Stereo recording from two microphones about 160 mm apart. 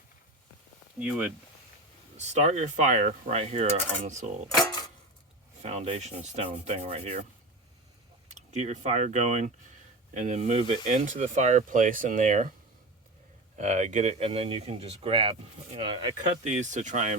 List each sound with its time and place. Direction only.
0.9 s speech: 5° right (ahead or behind)
2.1 s speech: 45° right (ahead or behind)
4.5 s a sound: 25° left (ahead or behind)
5.6 s speech: 40° right (ahead or behind)
8.3 s speech: 50° right (ahead or behind)
13.6 s speech: 45° right (ahead or behind)
16.5 s speech: 50° right (ahead or behind)